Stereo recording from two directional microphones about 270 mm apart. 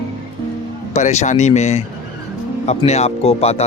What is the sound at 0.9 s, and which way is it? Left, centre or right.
Speech, left.